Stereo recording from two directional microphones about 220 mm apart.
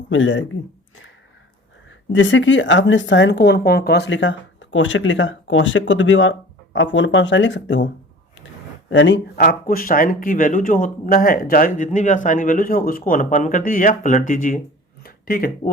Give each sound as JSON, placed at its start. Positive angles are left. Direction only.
{"t": 0.1, "sound": "a woman's voice", "side_deg": 60}
{"t": 1.9, "sound": "a woman's voice", "side_deg": 60}
{"t": 8.9, "sound": "speech", "side_deg": 55}